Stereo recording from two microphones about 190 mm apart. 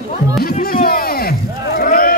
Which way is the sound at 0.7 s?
50° left (ahead or behind).